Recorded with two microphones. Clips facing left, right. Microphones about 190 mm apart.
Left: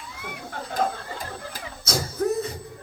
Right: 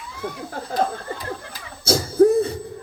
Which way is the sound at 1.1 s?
50° left (ahead or behind).